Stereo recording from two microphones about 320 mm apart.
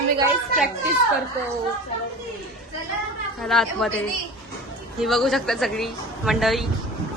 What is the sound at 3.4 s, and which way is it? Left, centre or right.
Speech, centre.